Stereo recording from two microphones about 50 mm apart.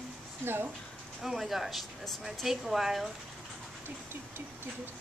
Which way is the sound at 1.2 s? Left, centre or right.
Centre.